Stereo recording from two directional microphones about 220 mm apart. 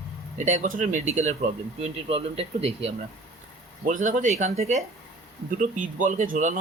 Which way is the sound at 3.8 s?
35° right (ahead or behind).